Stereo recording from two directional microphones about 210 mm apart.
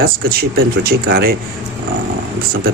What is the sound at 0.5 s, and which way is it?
Speech, 45° right (ahead or behind).